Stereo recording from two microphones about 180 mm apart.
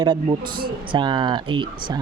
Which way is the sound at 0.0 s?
25° right (ahead or behind).